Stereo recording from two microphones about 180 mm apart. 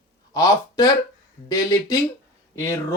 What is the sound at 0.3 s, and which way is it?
Speech, 20° left (ahead or behind).